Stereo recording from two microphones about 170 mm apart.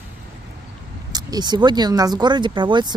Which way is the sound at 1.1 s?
25° right (ahead or behind).